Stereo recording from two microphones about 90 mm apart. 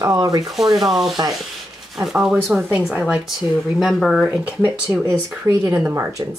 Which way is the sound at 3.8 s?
Centre (ahead or behind).